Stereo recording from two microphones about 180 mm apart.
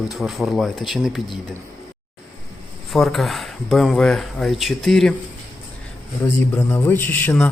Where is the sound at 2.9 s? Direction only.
Centre (ahead or behind).